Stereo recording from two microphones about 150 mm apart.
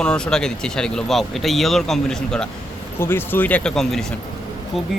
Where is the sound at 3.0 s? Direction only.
15° left (ahead or behind).